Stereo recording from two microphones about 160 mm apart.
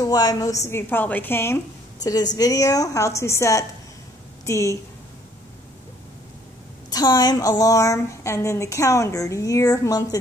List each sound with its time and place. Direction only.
0.0 s a woman's voice: 25° left (ahead or behind)
6.9 s a woman's voice: 25° left (ahead or behind)